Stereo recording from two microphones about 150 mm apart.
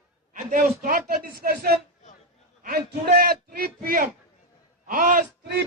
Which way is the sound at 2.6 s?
90° right.